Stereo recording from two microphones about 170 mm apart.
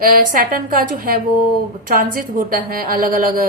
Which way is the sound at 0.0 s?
55° right (ahead or behind).